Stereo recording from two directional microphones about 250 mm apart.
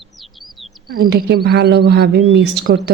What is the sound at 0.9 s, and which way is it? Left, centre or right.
Speech, right.